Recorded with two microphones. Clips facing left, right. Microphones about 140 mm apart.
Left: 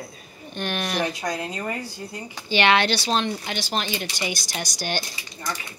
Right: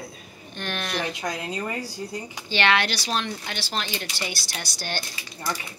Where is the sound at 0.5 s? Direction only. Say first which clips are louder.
Left 3 dB; 15° left (ahead or behind).